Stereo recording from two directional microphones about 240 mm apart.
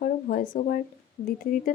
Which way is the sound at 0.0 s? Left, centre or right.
Left.